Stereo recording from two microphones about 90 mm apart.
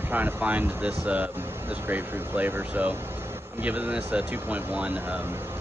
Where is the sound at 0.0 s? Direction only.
20° right (ahead or behind).